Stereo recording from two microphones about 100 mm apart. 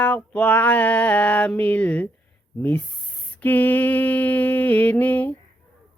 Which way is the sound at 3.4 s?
15° left (ahead or behind).